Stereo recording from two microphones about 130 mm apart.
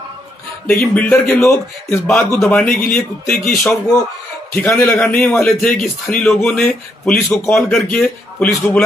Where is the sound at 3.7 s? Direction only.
25° left (ahead or behind).